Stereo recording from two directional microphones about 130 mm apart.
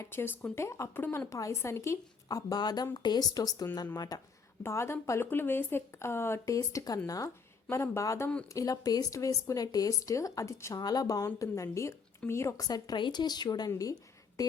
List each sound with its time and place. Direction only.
0.0 s a woman's voice: 15° left (ahead or behind)
4.6 s a woman's voice: 20° left (ahead or behind)
14.4 s a sound: 30° left (ahead or behind)